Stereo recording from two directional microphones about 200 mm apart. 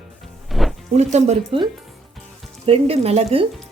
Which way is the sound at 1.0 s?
35° right (ahead or behind).